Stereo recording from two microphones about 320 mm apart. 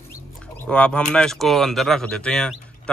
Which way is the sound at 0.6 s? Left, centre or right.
Centre.